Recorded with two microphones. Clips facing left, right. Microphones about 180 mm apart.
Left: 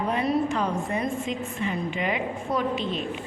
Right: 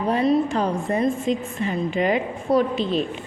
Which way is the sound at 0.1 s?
35° right (ahead or behind).